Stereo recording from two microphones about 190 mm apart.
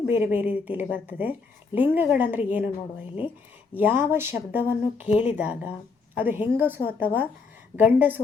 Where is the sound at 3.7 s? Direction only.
10° right (ahead or behind).